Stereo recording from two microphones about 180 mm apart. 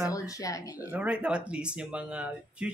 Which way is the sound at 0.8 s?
10° right (ahead or behind).